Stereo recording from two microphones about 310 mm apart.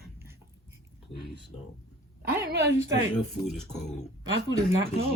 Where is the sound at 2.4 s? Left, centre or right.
Right.